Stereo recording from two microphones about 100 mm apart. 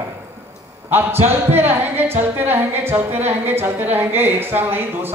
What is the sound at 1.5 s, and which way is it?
A woman's voice, 20° right (ahead or behind).